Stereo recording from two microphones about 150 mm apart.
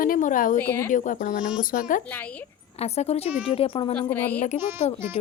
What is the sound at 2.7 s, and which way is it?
A woman's voice, 45° left (ahead or behind).